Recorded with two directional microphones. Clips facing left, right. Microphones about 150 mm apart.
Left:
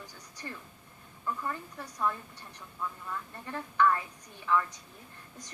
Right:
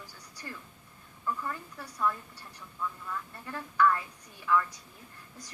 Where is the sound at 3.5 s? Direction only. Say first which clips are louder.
Even; 15° left (ahead or behind).